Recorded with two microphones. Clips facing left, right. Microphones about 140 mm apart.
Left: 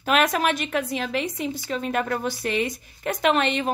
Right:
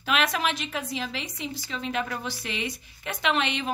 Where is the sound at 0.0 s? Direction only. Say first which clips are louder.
Left 5 dB; 45° left (ahead or behind).